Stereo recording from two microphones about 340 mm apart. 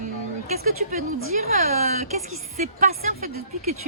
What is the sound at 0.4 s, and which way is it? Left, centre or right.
Music, centre.